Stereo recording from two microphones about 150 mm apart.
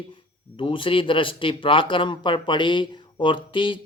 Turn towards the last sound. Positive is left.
turn(degrees=35)  # may be behind; listen again after turning